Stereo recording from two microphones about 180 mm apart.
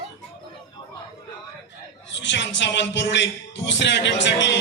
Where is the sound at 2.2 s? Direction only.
80° left.